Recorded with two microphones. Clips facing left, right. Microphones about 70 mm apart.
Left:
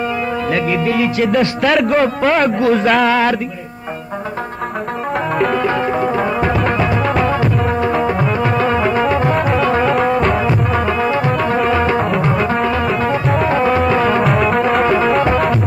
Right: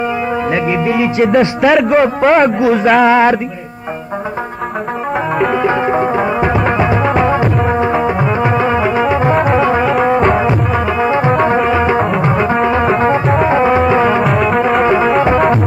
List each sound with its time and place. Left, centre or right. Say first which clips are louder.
0.5 s music: right 1 dB; centre
1.7 s speech: right 3 dB; centre
2.0 s speech: right 4 dB; centre
3.1 s music: right 5 dB; right
5.4 s music: right 3 dB; centre
11.1 s music: right 4 dB; right
14.2 s music: right 2 dB; centre